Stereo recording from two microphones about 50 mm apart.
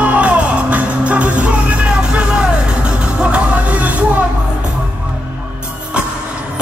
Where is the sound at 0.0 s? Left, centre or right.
Right.